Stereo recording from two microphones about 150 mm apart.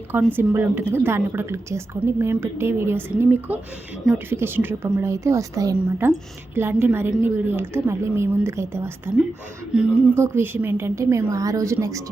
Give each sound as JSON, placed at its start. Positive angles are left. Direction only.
{"t": 0.1, "sound": "a woman's voice", "side_deg": -15}
{"t": 9.7, "sound": "a woman's voice", "side_deg": -5}
{"t": 10.2, "sound": "a woman's voice", "side_deg": -15}